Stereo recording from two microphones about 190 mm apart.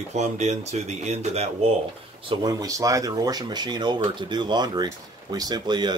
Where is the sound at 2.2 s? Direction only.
25° right (ahead or behind).